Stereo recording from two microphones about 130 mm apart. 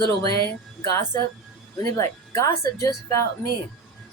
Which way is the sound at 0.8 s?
30° left (ahead or behind).